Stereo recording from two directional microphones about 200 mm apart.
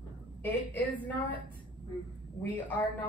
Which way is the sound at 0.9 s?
10° left (ahead or behind).